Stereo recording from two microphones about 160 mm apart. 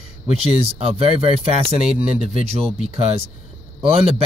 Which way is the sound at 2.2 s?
40° right (ahead or behind).